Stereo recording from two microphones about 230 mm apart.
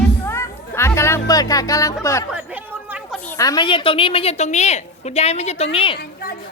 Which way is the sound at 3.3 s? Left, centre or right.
Centre.